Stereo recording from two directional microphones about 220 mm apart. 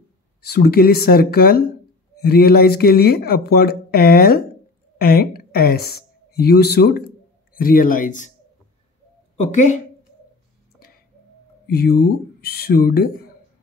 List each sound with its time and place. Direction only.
0.4 s a woman's voice: 45° left (ahead or behind)
9.4 s speech: 35° left (ahead or behind)
11.6 s speech: 45° left (ahead or behind)